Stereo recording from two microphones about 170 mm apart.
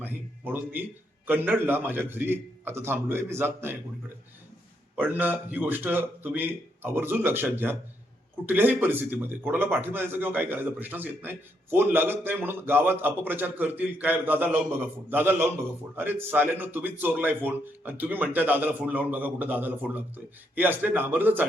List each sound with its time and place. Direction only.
0.0 s a man's voice: 10° right (ahead or behind)
4.9 s a man's voice: 10° right (ahead or behind)